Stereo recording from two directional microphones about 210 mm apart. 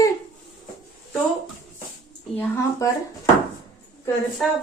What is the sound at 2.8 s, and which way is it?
Speech, 15° left (ahead or behind).